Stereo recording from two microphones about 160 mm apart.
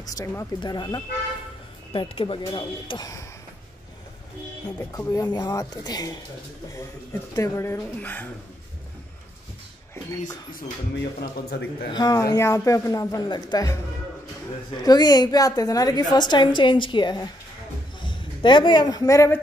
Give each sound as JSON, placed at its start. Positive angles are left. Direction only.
{"t": 0.1, "sound": "a woman's voice", "side_deg": 20}
{"t": 4.7, "sound": "a woman's voice", "side_deg": 20}
{"t": 7.3, "sound": "speech", "side_deg": 20}
{"t": 11.1, "sound": "a man's voice", "side_deg": 70}
{"t": 11.9, "sound": "a woman's voice", "side_deg": 25}
{"t": 14.9, "sound": "a woman's voice", "side_deg": 25}